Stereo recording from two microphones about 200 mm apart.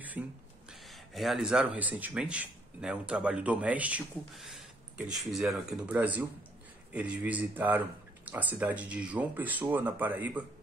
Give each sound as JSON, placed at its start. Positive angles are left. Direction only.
{"t": 0.2, "sound": "a man's voice", "side_deg": -5}